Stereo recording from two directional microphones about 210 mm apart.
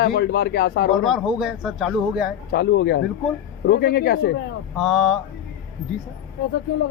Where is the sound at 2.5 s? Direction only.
50° left (ahead or behind).